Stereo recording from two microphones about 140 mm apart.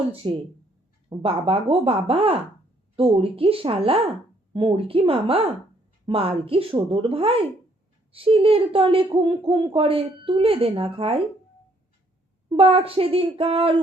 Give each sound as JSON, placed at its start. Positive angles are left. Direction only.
{"t": 0.2, "sound": "speech", "side_deg": -40}
{"t": 12.5, "sound": "speech", "side_deg": -45}